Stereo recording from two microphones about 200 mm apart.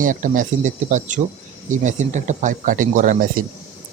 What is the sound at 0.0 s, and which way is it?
Speech, 40° right (ahead or behind).